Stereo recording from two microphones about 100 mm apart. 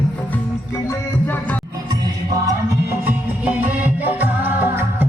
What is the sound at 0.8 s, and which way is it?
Music, 20° left (ahead or behind).